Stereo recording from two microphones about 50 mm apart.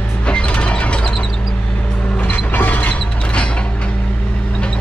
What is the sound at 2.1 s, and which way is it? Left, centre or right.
Mechanisms, left.